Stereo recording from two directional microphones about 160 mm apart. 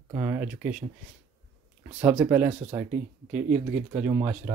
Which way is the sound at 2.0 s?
5° right (ahead or behind).